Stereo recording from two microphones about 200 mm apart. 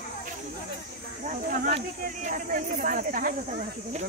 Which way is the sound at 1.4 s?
45° right (ahead or behind).